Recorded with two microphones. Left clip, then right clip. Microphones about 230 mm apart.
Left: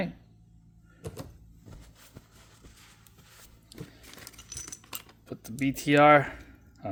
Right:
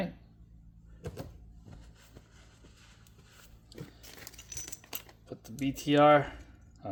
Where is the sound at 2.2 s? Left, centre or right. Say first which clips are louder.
Left 3 dB; left.